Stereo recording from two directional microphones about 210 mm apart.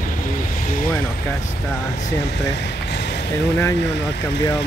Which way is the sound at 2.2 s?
55° left (ahead or behind).